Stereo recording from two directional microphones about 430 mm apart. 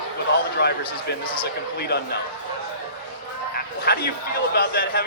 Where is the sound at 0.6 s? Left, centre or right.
Left.